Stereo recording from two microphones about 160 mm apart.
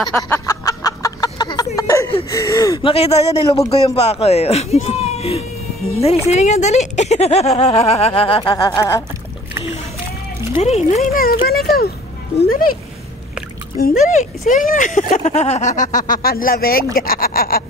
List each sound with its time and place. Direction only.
0.0 s a sound: 10° left (ahead or behind)
2.2 s gasp: 20° left (ahead or behind)
2.9 s speech: 40° left (ahead or behind); by 9.0 s 20° left (ahead or behind)
10.6 s speech: 45° left (ahead or behind)
11.1 s speech: 70° left (ahead or behind)
13.7 s speech: 55° left (ahead or behind)